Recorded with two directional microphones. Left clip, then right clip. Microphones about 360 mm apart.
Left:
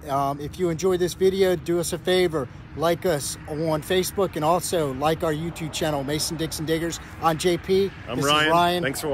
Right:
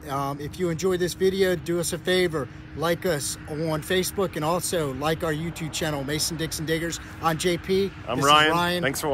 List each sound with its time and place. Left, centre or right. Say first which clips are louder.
0.1 s speech: left 4 dB; centre
8.3 s speech: right 2 dB; centre
8.5 s speech: left 4 dB; centre